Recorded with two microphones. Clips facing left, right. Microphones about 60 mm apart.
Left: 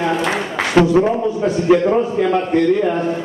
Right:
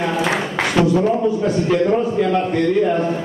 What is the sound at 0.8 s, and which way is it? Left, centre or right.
Speech, left.